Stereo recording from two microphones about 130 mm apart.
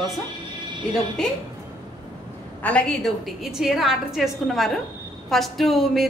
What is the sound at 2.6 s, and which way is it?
Speech, 10° left (ahead or behind).